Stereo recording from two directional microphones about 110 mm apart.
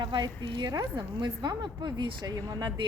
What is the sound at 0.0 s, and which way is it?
A woman's voice, 45° right (ahead or behind).